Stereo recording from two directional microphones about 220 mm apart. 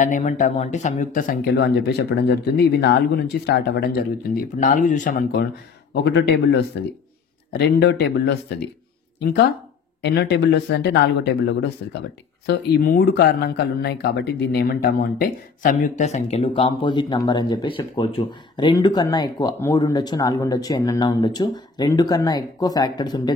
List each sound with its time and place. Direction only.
0.0 s speech: 35° left (ahead or behind); by 8.4 s 50° left (ahead or behind)
10.0 s speech: 50° left (ahead or behind); by 23.3 s 20° left (ahead or behind)